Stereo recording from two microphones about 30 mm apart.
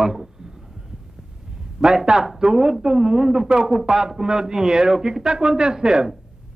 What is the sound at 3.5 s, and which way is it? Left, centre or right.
Speech, right.